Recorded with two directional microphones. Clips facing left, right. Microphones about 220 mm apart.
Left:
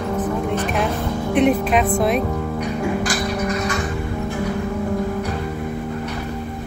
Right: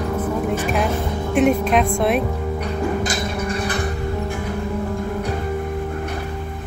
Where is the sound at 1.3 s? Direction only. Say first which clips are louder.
Even; centre (ahead or behind).